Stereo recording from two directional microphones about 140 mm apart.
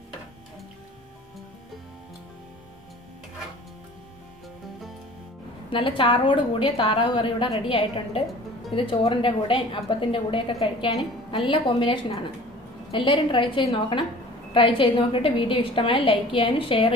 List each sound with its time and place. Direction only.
5.7 s a woman's voice: 40° left (ahead or behind)